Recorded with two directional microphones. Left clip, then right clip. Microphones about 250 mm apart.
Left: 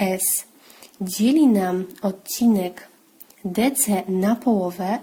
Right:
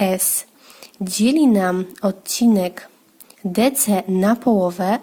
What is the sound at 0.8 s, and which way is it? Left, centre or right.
A woman's voice, centre.